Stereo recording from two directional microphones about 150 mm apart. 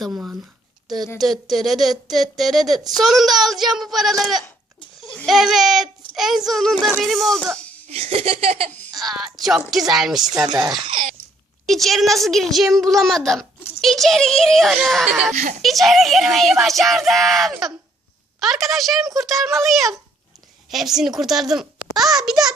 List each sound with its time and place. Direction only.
0.1 s a sound: 10° right (ahead or behind)
0.9 s a woman's voice: centre (ahead or behind)
7.9 s speech: 40° right (ahead or behind)
8.9 s speech: centre (ahead or behind)
10.5 s speech: 30° right (ahead or behind)
11.6 s speech: centre (ahead or behind)
15.3 s a child's voice: 55° right (ahead or behind)
15.6 s speech: centre (ahead or behind)